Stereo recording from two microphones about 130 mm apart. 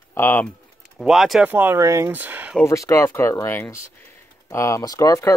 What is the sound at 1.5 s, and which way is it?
Speech, 15° right (ahead or behind).